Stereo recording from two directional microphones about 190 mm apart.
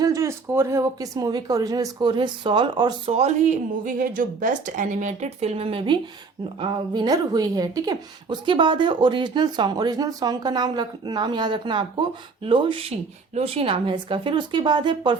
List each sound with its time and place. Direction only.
0.0 s speech: 15° right (ahead or behind)